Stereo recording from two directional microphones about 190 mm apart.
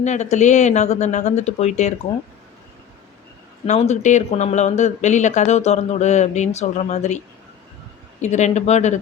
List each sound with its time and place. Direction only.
0.0 s speech: 35° left (ahead or behind)
3.7 s speech: 35° left (ahead or behind)
8.2 s speech: 35° left (ahead or behind)